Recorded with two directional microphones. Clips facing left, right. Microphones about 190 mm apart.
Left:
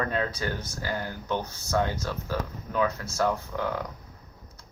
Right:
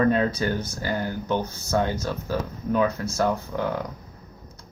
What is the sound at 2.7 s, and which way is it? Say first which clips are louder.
Speech: right 5 dB; 20° right (ahead or behind).